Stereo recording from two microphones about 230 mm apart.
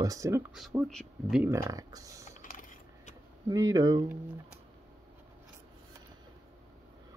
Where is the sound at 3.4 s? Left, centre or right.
Centre.